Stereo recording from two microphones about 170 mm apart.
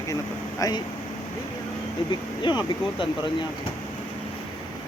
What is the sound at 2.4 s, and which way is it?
Speech, 25° left (ahead or behind).